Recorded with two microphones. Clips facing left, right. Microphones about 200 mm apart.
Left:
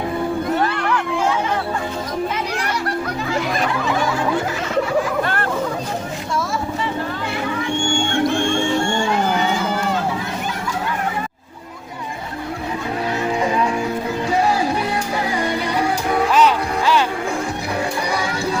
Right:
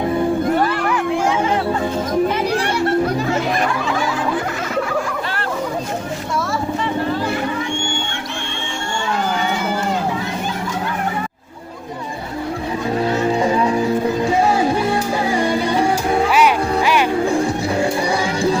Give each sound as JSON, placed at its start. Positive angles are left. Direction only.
{"t": 15.3, "sound": "music", "side_deg": -30}
{"t": 16.3, "sound": "music", "side_deg": -10}
{"t": 17.2, "sound": "music", "side_deg": -30}